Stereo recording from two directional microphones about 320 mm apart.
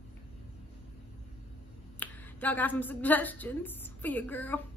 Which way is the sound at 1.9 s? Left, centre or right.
Centre.